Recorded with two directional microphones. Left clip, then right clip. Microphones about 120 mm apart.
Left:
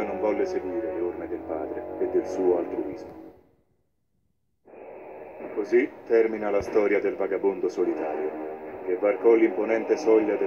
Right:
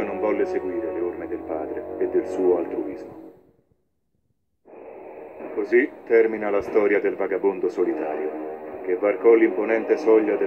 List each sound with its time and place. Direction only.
0.0 s music: 20° right (ahead or behind)
2.0 s a man's voice: 20° right (ahead or behind)
5.6 s a man's voice: 20° right (ahead or behind)